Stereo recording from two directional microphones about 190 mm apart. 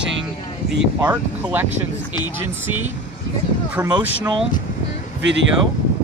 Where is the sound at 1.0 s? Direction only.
10° right (ahead or behind).